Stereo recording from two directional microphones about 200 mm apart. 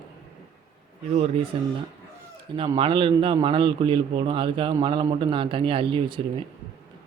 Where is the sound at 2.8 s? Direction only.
25° right (ahead or behind).